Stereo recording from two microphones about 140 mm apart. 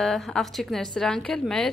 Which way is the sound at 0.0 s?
5° left (ahead or behind).